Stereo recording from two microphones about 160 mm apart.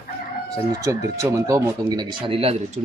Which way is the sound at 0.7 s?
20° right (ahead or behind).